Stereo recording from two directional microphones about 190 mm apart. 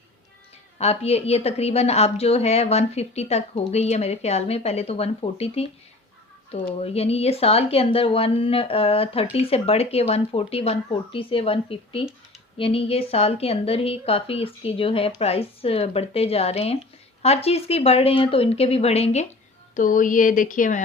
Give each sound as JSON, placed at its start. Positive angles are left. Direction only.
{"t": 0.8, "sound": "a woman's voice", "side_deg": 35}
{"t": 19.7, "sound": "speech", "side_deg": 45}